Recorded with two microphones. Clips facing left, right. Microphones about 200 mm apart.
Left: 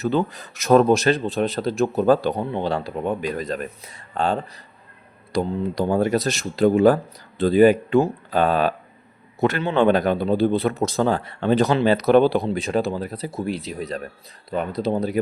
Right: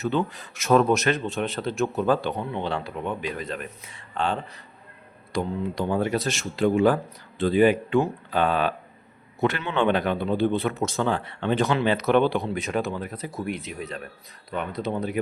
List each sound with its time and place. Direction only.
0.0 s a man's voice: 35° left (ahead or behind)